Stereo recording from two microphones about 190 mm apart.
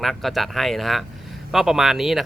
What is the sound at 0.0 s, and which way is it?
Speech, centre (ahead or behind).